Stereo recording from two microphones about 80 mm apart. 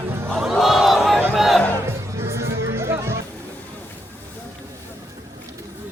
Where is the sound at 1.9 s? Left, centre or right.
Right.